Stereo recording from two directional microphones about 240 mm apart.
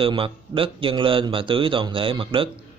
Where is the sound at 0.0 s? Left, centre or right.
Right.